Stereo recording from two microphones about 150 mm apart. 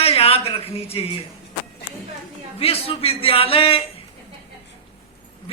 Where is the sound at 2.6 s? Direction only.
40° left (ahead or behind).